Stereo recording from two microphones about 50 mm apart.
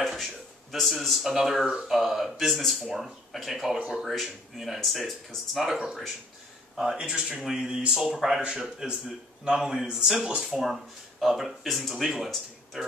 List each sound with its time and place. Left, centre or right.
0.0 s speech: centre
10.4 s speech: centre